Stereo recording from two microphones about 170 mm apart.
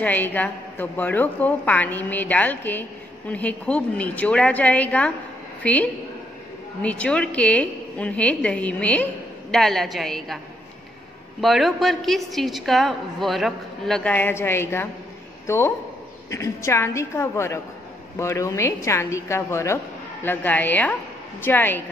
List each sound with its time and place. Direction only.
0.0 s a woman's voice: 10° left (ahead or behind)
11.4 s a woman's voice: centre (ahead or behind)